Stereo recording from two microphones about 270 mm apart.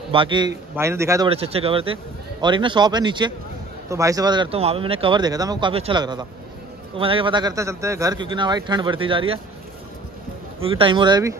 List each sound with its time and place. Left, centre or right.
0.1 s speech: centre
1.3 s speech: right
10.6 s speech: centre